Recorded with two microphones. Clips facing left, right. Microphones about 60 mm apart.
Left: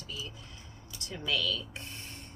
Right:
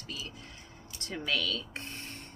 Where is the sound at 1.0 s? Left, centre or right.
Right.